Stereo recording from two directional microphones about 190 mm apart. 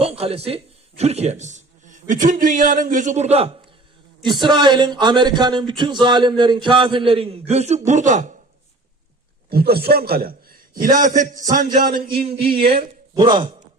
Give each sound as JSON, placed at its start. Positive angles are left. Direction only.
{"t": 0.0, "sound": "a man's voice", "side_deg": -30}
{"t": 9.5, "sound": "a man's voice", "side_deg": -55}
{"t": 12.7, "sound": "a man's voice", "side_deg": -25}